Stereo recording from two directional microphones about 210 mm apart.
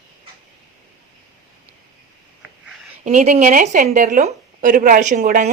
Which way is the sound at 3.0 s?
35° right (ahead or behind).